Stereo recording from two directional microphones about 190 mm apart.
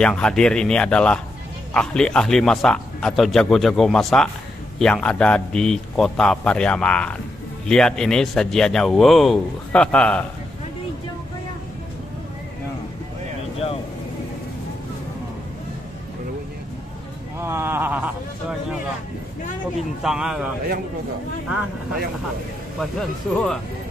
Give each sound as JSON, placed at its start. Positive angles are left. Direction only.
{"t": 0.0, "sound": "speech", "side_deg": 5}
{"t": 17.4, "sound": "a sound", "side_deg": -10}
{"t": 20.0, "sound": "speech", "side_deg": -5}
{"t": 22.8, "sound": "speech", "side_deg": 5}